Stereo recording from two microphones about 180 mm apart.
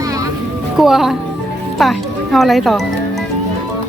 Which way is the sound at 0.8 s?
Centre (ahead or behind).